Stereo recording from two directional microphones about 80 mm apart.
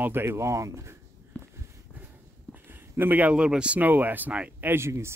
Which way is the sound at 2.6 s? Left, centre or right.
Right.